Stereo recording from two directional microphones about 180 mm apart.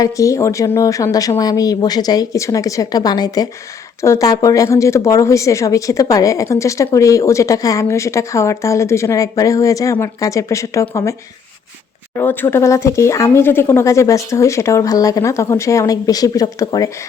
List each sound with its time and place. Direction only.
0.0 s speech: 20° left (ahead or behind)
12.1 s speech: 10° left (ahead or behind)